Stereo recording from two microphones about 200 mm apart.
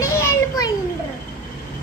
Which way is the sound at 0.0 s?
15° left (ahead or behind).